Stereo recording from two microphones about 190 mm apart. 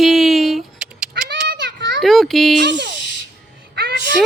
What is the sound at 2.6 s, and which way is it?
Speech, 65° right (ahead or behind).